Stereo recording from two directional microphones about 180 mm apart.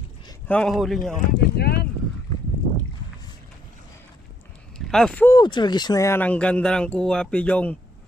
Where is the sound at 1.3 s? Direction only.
60° left (ahead or behind).